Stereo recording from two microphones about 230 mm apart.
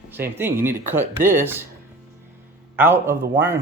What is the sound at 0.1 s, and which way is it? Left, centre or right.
A man's voice, centre.